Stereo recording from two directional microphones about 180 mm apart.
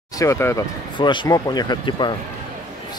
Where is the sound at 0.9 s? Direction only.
25° left (ahead or behind).